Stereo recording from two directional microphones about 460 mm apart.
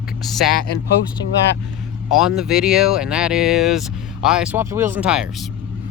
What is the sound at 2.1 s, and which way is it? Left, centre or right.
Speech, centre.